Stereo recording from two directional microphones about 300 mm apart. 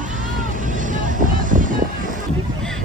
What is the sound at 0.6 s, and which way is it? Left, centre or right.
Vehicle, right.